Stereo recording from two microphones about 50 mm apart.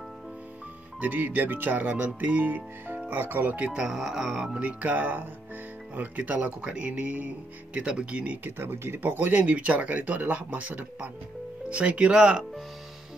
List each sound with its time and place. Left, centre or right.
1.0 s speech: right
2.0 s speech: right
3.7 s speech: centre
4.6 s speech: right
8.5 s speech: right
9.3 s speech: right